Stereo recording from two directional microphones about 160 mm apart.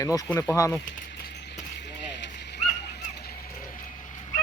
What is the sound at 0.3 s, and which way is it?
Speech, 20° left (ahead or behind).